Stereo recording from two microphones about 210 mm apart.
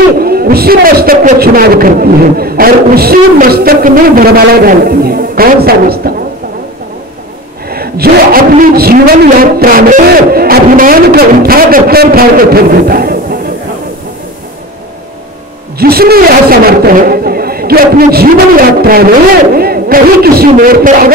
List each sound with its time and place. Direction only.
0.2 s a man's voice: 45° right (ahead or behind)
7.7 s a man's voice: 45° right (ahead or behind)
15.8 s a man's voice: 45° right (ahead or behind)